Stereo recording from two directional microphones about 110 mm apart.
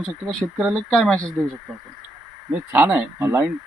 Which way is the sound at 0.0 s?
5° left (ahead or behind).